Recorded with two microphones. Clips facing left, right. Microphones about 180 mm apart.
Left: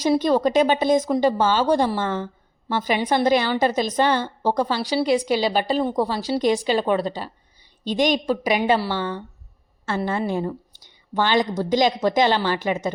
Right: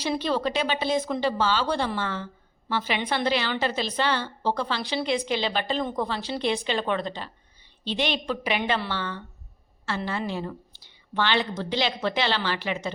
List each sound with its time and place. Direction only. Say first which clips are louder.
0.0 s speech: left 7 dB; 45° left (ahead or behind)
8.9 s speech: left 6 dB; 15° left (ahead or behind)
9.8 s speech: left 6 dB; 45° left (ahead or behind)